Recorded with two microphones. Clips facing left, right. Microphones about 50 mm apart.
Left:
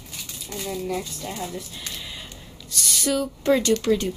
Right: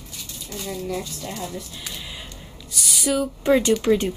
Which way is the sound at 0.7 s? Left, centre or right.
Centre.